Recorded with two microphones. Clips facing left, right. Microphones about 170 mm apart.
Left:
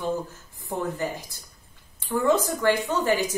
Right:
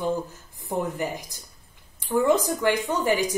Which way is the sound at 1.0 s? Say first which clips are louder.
Even; 15° right (ahead or behind).